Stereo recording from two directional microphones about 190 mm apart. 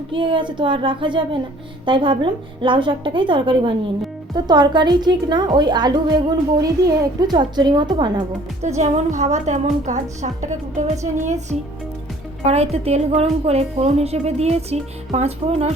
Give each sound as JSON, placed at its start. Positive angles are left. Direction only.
{"t": 0.1, "sound": "a woman's voice", "side_deg": -25}
{"t": 8.6, "sound": "speech", "side_deg": -40}